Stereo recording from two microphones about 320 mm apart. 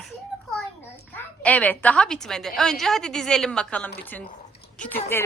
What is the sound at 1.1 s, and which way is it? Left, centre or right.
A woman's voice, centre.